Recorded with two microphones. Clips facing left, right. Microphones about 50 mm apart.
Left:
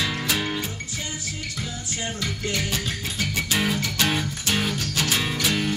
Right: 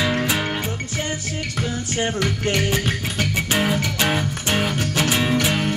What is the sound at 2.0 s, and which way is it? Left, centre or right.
Music, right.